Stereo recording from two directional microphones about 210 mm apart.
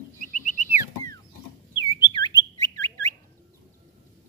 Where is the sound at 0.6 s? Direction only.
10° right (ahead or behind).